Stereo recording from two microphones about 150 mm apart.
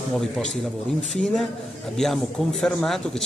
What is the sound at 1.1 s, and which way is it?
A man's voice, centre (ahead or behind).